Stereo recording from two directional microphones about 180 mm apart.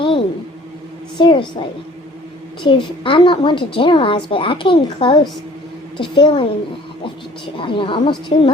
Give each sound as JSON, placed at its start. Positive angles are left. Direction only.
{"t": 0.0, "sound": "a sound", "side_deg": 30}
{"t": 1.2, "sound": "a woman's voice", "side_deg": 25}
{"t": 2.6, "sound": "a woman's voice", "side_deg": 30}
{"t": 7.6, "sound": "a woman's voice", "side_deg": 30}